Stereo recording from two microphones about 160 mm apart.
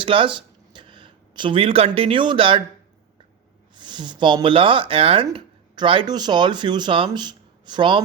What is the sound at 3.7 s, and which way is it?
Speech, 30° right (ahead or behind).